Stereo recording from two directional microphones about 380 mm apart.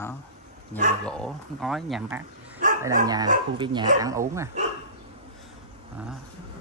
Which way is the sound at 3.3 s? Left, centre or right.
Centre.